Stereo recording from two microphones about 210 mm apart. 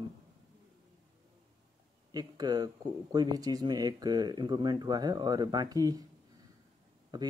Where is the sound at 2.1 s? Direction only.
20° right (ahead or behind).